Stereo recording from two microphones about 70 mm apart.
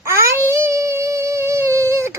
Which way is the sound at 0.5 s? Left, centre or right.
Right.